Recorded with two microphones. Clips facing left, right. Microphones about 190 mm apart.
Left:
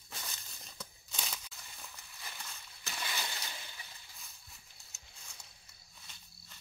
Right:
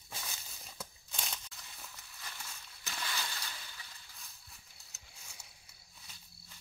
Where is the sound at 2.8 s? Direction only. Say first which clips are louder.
Even; 15° left (ahead or behind).